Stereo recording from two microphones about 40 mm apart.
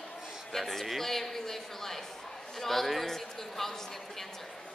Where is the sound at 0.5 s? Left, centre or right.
Centre.